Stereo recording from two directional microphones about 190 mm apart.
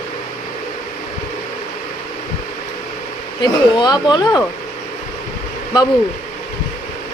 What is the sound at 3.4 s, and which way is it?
Speech, 20° left (ahead or behind).